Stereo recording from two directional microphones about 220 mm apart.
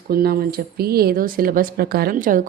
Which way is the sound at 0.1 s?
45° right (ahead or behind).